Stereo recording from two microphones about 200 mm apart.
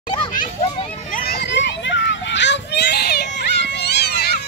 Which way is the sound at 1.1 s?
50° left (ahead or behind).